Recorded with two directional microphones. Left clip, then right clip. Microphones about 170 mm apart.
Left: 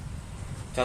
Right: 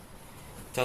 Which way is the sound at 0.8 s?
45° right (ahead or behind).